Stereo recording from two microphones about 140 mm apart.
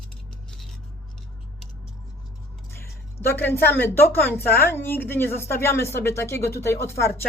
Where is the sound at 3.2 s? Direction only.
15° left (ahead or behind).